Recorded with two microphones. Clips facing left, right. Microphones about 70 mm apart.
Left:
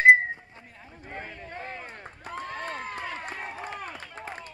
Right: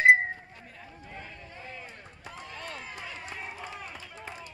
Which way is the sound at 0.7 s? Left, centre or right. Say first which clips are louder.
Left 5 dB; left.